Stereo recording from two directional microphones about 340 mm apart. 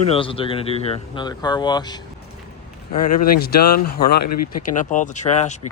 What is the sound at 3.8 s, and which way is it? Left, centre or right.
Speech, left.